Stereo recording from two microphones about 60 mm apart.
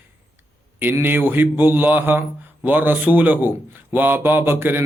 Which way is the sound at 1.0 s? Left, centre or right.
Right.